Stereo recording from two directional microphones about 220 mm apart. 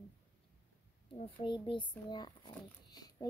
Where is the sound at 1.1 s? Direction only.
25° left (ahead or behind).